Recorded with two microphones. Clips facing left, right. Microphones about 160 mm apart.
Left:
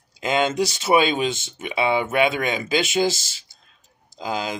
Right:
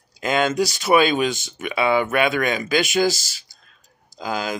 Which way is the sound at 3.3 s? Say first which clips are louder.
Right 2 dB; 25° left (ahead or behind).